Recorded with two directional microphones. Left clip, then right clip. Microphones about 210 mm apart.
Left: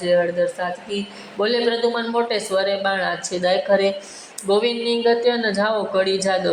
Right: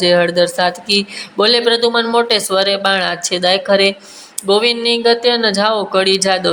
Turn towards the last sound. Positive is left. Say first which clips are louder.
# right 6 dB
turn(degrees=-15)  # may be behind; listen again after turning